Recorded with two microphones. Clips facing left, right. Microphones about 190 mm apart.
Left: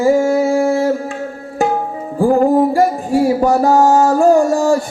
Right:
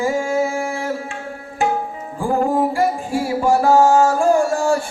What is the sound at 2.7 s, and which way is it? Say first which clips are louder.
Music: left 6 dB; 40° left (ahead or behind).